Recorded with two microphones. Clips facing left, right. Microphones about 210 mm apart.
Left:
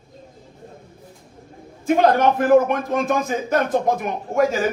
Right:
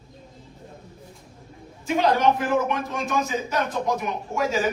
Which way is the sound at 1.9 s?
55° left (ahead or behind).